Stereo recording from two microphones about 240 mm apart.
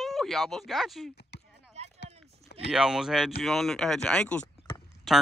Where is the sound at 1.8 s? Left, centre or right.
Right.